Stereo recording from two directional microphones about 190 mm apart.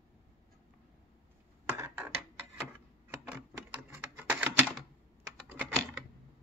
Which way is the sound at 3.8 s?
10° right (ahead or behind).